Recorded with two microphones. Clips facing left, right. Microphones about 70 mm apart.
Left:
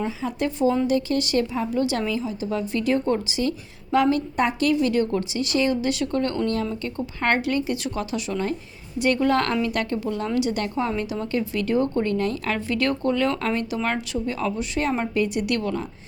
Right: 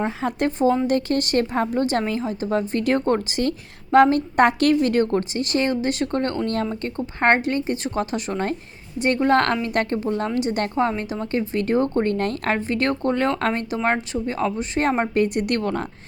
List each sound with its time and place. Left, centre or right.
0.2 s a woman's voice: right
12.5 s a woman's voice: right